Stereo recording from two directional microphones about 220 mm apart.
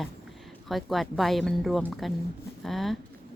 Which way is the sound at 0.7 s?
Centre (ahead or behind).